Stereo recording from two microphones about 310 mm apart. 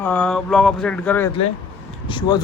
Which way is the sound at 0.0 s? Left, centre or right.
Centre.